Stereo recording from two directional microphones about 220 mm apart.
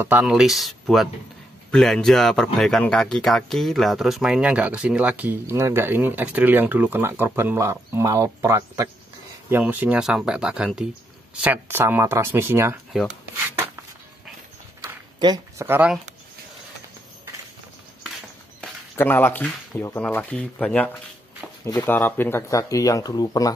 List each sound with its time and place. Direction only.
0.0 s speech: 5° right (ahead or behind)
14.8 s a sound: 20° right (ahead or behind)
18.6 s speech: 10° left (ahead or behind)